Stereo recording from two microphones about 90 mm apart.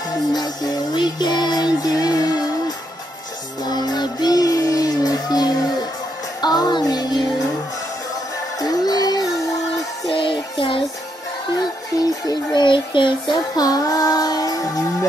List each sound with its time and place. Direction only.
0.3 s music: 50° left (ahead or behind)
3.6 s music: 50° left (ahead or behind)
8.5 s music: 45° left (ahead or behind)
10.0 s music: 75° left (ahead or behind)
11.5 s music: 50° left (ahead or behind)
13.6 s child singing: 45° left (ahead or behind)